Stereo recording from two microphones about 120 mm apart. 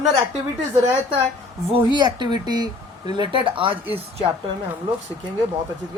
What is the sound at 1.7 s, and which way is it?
Speech, 40° right (ahead or behind).